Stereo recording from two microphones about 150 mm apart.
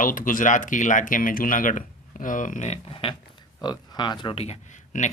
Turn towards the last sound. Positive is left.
turn(degrees=60)  # may be behind; listen again after turning